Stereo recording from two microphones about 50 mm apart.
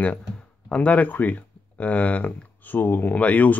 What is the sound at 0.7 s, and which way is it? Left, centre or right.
Speech, left.